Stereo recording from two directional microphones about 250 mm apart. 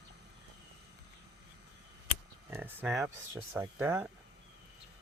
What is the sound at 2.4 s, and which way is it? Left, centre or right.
Speech, centre.